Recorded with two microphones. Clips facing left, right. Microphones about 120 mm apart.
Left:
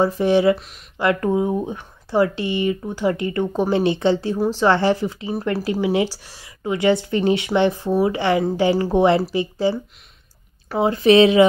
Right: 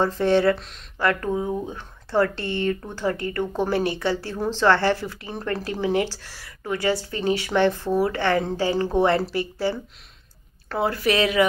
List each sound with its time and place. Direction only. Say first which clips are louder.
0.0 s speech: left 3 dB; 15° left (ahead or behind)
0.9 s speech: left 4 dB; 15° left (ahead or behind)